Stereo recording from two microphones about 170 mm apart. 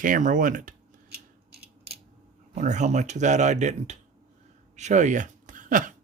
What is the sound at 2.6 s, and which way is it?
Speech, 45° right (ahead or behind).